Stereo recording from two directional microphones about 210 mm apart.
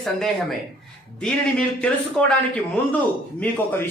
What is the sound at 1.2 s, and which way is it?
A man's voice, 5° left (ahead or behind).